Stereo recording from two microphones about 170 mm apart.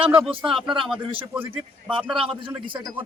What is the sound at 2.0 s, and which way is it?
Speech, centre (ahead or behind).